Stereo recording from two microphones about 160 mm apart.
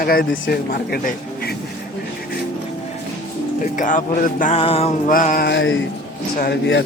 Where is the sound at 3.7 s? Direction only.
55° left (ahead or behind).